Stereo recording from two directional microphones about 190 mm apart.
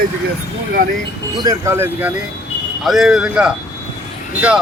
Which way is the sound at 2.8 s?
Centre (ahead or behind).